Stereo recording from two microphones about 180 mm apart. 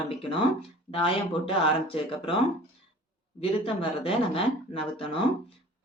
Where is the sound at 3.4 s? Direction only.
30° left (ahead or behind).